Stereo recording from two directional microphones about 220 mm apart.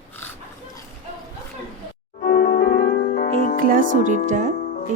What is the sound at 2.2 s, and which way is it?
Music, 45° left (ahead or behind).